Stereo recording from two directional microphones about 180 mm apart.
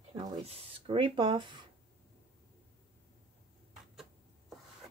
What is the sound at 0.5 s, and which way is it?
Speech, 30° right (ahead or behind).